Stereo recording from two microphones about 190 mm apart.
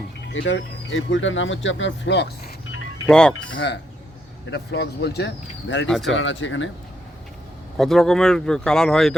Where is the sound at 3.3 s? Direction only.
70° left (ahead or behind).